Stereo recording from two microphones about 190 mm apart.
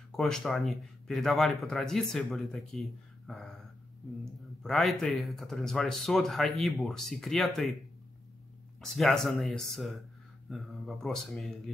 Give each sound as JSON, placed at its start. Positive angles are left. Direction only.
{"t": 0.1, "sound": "speech", "side_deg": 5}
{"t": 8.9, "sound": "speech", "side_deg": 0}